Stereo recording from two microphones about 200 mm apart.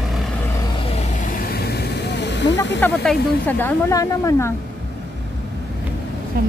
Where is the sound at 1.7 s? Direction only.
55° left (ahead or behind).